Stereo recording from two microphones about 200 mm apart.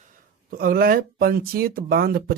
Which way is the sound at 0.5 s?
45° right (ahead or behind).